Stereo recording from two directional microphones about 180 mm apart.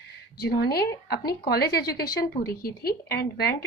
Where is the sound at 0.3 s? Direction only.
60° left (ahead or behind).